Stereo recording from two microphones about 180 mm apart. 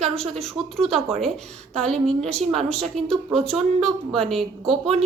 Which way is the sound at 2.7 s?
Centre (ahead or behind).